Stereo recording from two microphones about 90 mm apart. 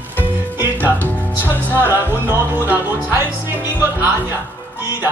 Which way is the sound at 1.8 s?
25° right (ahead or behind).